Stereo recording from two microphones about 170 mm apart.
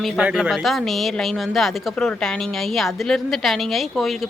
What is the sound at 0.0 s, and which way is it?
Speech, 5° right (ahead or behind).